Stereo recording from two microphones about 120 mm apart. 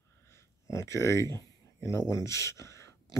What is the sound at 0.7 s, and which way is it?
Speech, 25° left (ahead or behind).